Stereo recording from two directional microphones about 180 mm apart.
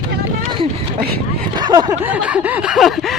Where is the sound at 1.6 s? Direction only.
25° right (ahead or behind).